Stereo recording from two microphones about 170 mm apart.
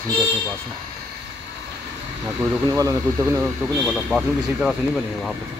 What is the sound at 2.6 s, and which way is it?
Speech, 20° right (ahead or behind).